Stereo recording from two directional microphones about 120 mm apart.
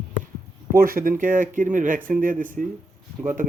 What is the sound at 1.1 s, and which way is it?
Speech, 90° right.